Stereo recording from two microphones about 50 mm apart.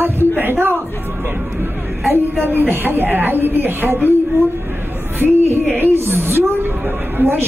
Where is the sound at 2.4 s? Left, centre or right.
Right.